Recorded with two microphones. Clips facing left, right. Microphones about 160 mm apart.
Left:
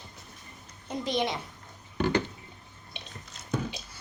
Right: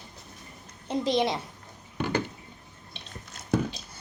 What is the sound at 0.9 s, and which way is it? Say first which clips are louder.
Speech: right 5 dB; 30° right (ahead or behind).